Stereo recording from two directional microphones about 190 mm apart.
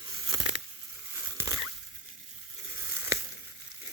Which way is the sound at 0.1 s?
20° right (ahead or behind).